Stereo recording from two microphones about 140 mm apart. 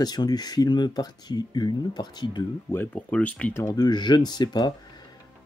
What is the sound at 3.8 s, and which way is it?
Speech, 30° left (ahead or behind).